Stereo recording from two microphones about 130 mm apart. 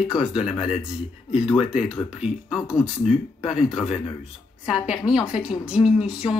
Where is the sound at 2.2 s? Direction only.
5° right (ahead or behind).